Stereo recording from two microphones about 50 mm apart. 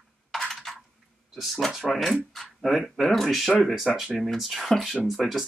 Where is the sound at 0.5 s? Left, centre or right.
Centre.